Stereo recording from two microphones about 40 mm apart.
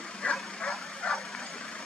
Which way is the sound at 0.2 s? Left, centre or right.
Centre.